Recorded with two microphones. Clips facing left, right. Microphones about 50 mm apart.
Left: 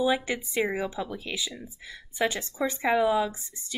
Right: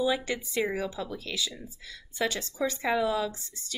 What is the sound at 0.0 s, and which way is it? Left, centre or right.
Speech, left.